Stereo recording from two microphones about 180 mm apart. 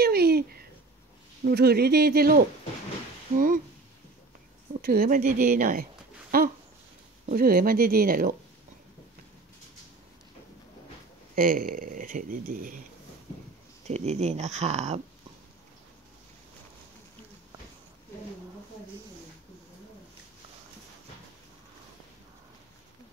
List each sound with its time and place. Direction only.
0.0 s a sound: 60° right (ahead or behind)
1.4 s speech: 60° right (ahead or behind)
4.8 s speech: 55° right (ahead or behind)
11.3 s speech: 50° right (ahead or behind)
13.8 s speech: 40° right (ahead or behind)